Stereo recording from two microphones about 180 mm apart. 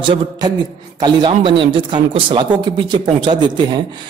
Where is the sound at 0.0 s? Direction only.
25° right (ahead or behind).